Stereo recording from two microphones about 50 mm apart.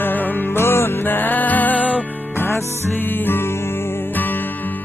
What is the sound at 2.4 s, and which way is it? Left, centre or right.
Music, left.